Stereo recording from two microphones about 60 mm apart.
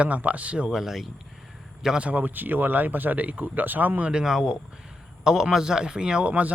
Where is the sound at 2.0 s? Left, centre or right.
Right.